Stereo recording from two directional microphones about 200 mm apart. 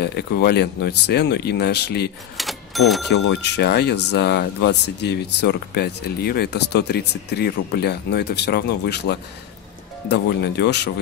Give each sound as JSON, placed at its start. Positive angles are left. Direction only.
{"t": 0.0, "sound": "speech", "side_deg": 55}
{"t": 2.3, "sound": "cash register", "side_deg": 0}
{"t": 3.1, "sound": "speech", "side_deg": 55}